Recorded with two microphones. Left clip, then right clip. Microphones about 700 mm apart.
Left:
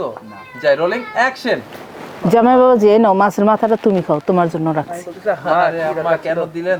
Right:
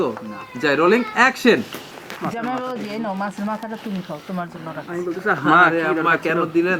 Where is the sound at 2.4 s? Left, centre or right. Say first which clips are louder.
Left 19 dB; left.